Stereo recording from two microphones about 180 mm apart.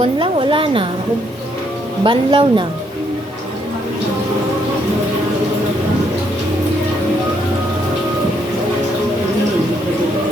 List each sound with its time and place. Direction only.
0.0 s a woman's voice: 30° right (ahead or behind)
2.0 s a woman's voice: 25° right (ahead or behind)